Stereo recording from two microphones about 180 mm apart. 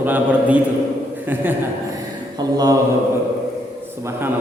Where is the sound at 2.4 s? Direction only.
25° right (ahead or behind).